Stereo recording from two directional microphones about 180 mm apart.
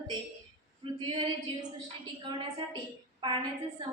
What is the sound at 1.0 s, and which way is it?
Speech, 25° right (ahead or behind).